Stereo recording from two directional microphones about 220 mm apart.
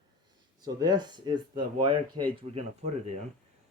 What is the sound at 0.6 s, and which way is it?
Speech, 20° right (ahead or behind).